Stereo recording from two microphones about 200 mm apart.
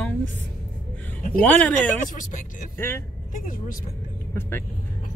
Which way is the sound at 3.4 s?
45° left (ahead or behind).